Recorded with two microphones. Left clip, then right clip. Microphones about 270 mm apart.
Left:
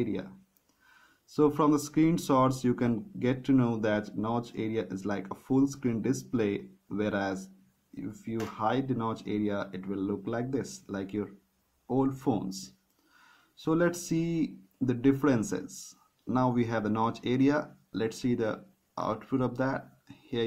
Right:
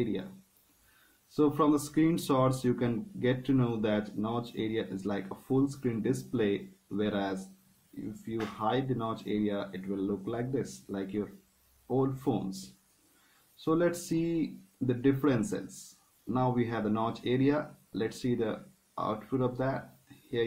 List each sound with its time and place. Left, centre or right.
1.3 s speech: left